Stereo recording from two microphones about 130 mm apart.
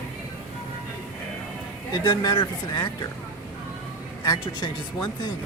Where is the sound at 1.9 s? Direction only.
35° left (ahead or behind).